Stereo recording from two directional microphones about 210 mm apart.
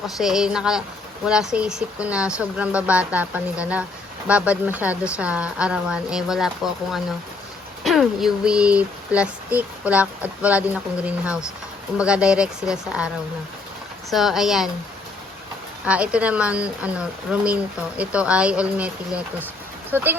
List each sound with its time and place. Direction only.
0.2 s speech: centre (ahead or behind)
7.9 s speech: centre (ahead or behind)
14.1 s speech: centre (ahead or behind)
15.9 s speech: 5° right (ahead or behind)